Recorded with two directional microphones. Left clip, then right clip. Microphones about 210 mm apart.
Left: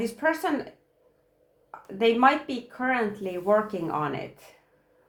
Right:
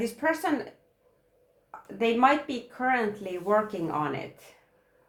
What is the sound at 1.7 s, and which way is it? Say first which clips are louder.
Speech: left 4 dB; 35° left (ahead or behind).